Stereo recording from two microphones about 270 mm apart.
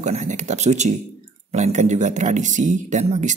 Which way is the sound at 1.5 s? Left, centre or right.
Right.